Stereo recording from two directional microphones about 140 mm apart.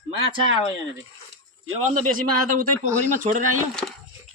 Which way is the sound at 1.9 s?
80° right.